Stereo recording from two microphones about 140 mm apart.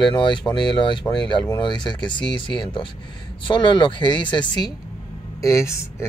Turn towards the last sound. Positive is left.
turn(degrees=20)  # may be behind; listen again after turning